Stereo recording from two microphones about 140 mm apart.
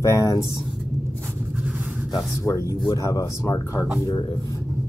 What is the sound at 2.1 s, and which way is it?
Speech, 20° left (ahead or behind).